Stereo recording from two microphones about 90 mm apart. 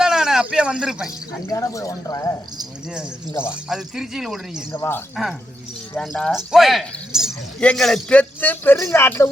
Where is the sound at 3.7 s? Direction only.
5° right (ahead or behind).